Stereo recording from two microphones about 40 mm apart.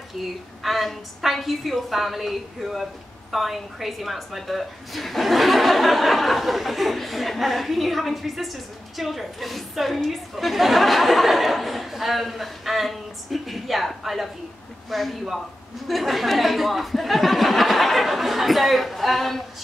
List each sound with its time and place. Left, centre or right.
0.1 s a woman's voice: centre